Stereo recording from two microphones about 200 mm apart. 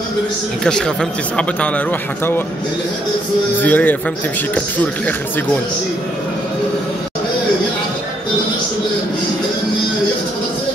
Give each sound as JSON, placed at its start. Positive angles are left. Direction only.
{"t": 0.7, "sound": "speech", "side_deg": 5}
{"t": 3.6, "sound": "speech", "side_deg": 10}